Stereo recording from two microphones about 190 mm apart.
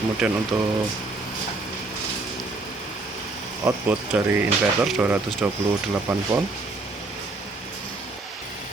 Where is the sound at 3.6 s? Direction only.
10° right (ahead or behind).